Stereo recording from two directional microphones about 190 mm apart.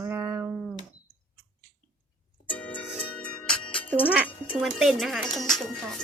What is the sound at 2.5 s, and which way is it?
Music, 10° left (ahead or behind).